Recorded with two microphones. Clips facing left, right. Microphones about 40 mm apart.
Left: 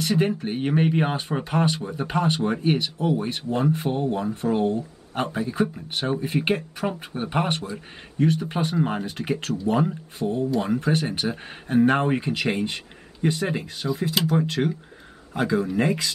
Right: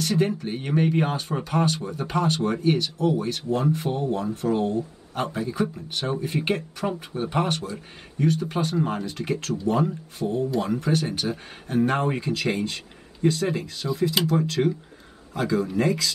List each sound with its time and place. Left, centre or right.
0.0 s speech: centre
7.2 s speech: left